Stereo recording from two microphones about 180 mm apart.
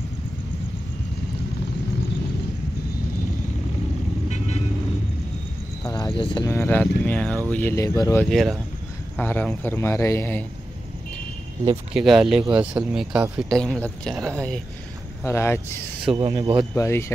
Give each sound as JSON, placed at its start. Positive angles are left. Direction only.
{"t": 6.1, "sound": "speech", "side_deg": 25}
{"t": 6.5, "sound": "a man's voice", "side_deg": 10}
{"t": 8.3, "sound": "a man's voice", "side_deg": 0}
{"t": 11.9, "sound": "speech", "side_deg": -5}
{"t": 15.2, "sound": "a man's voice", "side_deg": 15}
{"t": 16.1, "sound": "speech", "side_deg": -30}
{"t": 16.7, "sound": "a man's voice", "side_deg": 15}